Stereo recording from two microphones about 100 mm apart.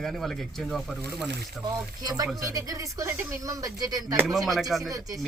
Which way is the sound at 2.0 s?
35° right (ahead or behind).